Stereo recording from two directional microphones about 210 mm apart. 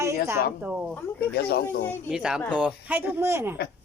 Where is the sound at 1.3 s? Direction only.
50° left (ahead or behind).